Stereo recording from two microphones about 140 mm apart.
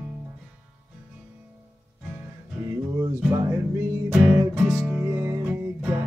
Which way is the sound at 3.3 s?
20° right (ahead or behind).